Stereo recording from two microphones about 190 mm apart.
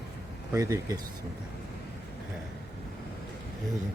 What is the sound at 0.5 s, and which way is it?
Speech, 15° right (ahead or behind).